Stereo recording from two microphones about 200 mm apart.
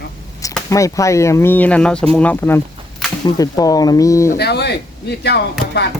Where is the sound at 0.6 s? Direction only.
15° left (ahead or behind).